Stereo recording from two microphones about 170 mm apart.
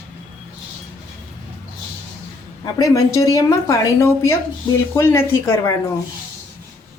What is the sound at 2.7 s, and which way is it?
A woman's voice, 20° left (ahead or behind).